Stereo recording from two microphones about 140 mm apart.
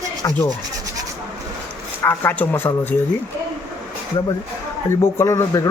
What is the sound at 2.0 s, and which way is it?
Speech, 15° left (ahead or behind).